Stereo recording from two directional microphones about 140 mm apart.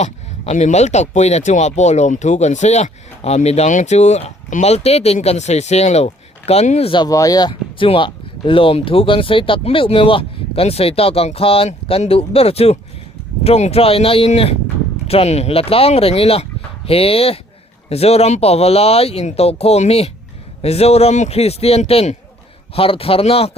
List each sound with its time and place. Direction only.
0.0 s speech: 55° left (ahead or behind)
7.0 s speech: 25° left (ahead or behind); by 23.5 s 45° left (ahead or behind)